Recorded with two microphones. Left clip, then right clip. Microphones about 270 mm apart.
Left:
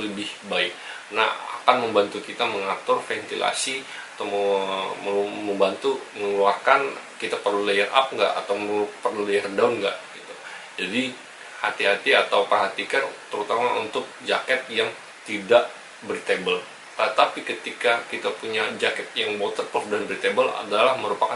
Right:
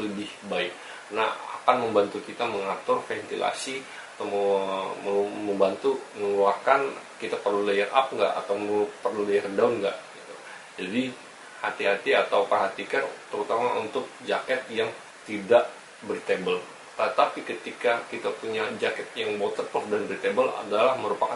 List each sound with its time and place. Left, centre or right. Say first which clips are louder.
0.2 s speech: left 7 dB; centre
4.3 s speech: left 2 dB; right
4.6 s speech: left 2 dB; centre
4.8 s speech: left 2 dB; right
6.4 s speech: left 3 dB; centre
8.3 s speech: left 2 dB; right
9.3 s speech: left 2 dB; centre
19.4 s speech: left 2 dB; right
19.9 s speech: left 3 dB; centre